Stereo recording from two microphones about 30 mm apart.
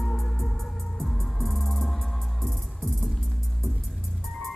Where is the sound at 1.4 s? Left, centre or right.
Centre.